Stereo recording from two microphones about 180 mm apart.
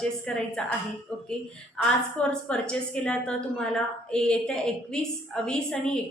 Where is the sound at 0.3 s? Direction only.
5° left (ahead or behind).